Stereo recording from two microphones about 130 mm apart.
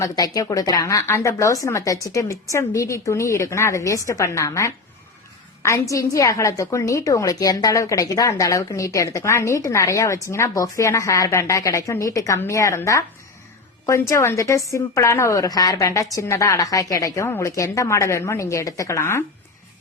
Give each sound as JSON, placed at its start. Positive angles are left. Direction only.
{"t": 0.0, "sound": "a woman's voice", "side_deg": 25}
{"t": 14.1, "sound": "a woman's voice", "side_deg": 20}